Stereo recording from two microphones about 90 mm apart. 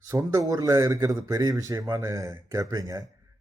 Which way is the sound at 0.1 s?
40° right (ahead or behind).